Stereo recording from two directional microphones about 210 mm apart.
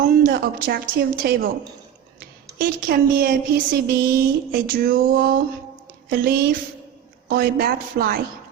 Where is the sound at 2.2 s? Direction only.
45° right (ahead or behind).